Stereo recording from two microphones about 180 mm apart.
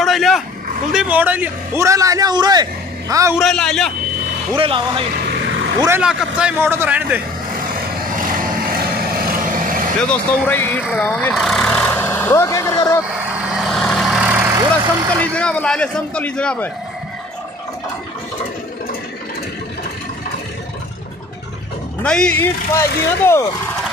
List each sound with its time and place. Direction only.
0.0 s livestock: centre (ahead or behind)
0.9 s a man's voice: 10° right (ahead or behind)
3.3 s a man's voice: centre (ahead or behind)
4.6 s speech: 30° right (ahead or behind)
5.8 s a man's voice: 10° right (ahead or behind)
8.2 s vehicle: 50° right (ahead or behind)
10.0 s speech: 10° left (ahead or behind)
13.6 s vehicle: centre (ahead or behind)
15.1 s speech: 5° left (ahead or behind)
22.0 s speech: 5° left (ahead or behind)